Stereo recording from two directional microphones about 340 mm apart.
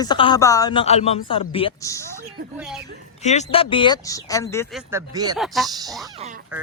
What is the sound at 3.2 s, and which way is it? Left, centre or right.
Speech, centre.